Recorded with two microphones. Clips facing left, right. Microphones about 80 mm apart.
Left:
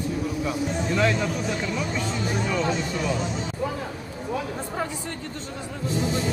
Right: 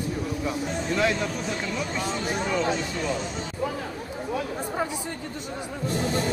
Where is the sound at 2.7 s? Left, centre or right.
Centre.